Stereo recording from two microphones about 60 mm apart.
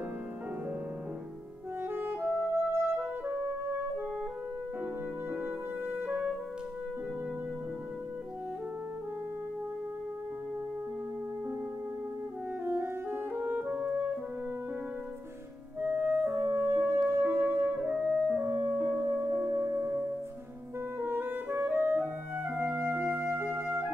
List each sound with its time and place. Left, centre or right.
1.9 s music: right
5.3 s music: right
12.6 s brass instrument: right
13.4 s music: right
15.8 s music: right
18.4 s music: right
18.9 s music: right
19.5 s music: right
21.0 s clarinet: right